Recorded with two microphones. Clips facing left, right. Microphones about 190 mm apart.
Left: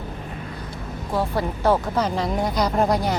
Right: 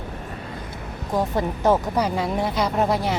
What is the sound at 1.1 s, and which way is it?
Speech, 20° right (ahead or behind).